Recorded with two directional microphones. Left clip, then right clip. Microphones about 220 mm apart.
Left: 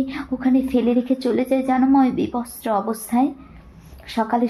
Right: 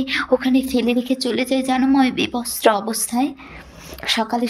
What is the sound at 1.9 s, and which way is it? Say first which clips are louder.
Speech: even; 50° right (ahead or behind).